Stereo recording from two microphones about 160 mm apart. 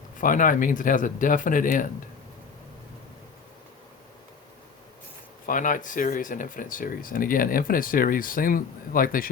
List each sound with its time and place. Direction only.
0.2 s speech: 55° left (ahead or behind)
5.5 s speech: 55° left (ahead or behind)